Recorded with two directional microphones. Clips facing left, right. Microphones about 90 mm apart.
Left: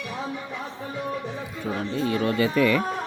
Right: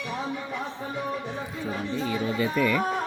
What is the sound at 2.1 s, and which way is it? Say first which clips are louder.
Speech: left 4 dB; 80° left.